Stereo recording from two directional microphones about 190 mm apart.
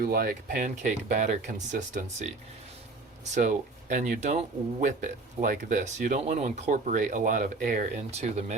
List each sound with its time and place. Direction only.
0.0 s speech: 50° right (ahead or behind)
3.3 s speech: 40° right (ahead or behind)
8.2 s speech: 35° right (ahead or behind)